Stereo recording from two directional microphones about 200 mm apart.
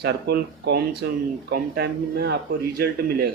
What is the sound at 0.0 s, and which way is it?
Speech, 55° right (ahead or behind).